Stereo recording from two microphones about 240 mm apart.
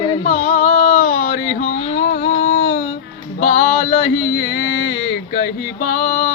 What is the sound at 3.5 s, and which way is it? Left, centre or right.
A child's voice, left.